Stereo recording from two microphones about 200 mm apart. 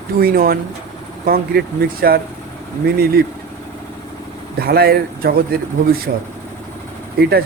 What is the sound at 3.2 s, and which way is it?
Speech, 50° right (ahead or behind).